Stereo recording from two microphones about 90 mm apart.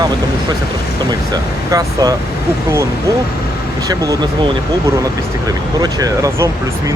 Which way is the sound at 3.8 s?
40° right (ahead or behind).